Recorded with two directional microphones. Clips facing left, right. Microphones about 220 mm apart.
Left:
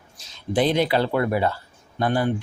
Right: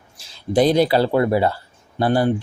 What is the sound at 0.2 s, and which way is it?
Speech, 30° right (ahead or behind).